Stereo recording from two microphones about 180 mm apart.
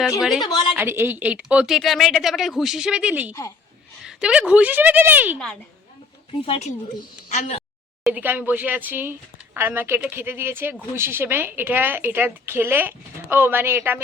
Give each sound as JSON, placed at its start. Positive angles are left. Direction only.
{"t": 0.2, "sound": "speech", "side_deg": 0}
{"t": 0.4, "sound": "a woman's voice", "side_deg": 25}
{"t": 0.8, "sound": "speech", "side_deg": -10}
{"t": 6.4, "sound": "a woman's voice", "side_deg": 35}
{"t": 8.0, "sound": "speech", "side_deg": -10}